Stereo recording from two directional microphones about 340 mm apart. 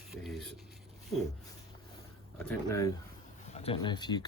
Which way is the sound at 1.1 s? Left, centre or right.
Centre.